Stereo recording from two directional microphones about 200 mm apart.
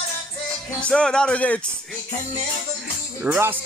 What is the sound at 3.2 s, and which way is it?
Speech, 10° right (ahead or behind).